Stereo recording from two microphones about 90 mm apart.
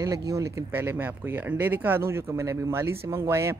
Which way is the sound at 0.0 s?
40° right (ahead or behind).